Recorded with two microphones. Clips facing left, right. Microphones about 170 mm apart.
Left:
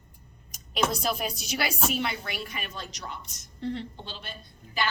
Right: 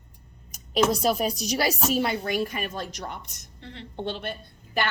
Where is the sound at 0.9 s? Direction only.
35° right (ahead or behind); by 4.3 s 60° right (ahead or behind).